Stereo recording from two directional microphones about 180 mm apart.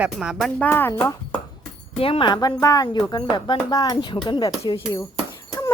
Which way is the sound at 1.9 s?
30° left (ahead or behind).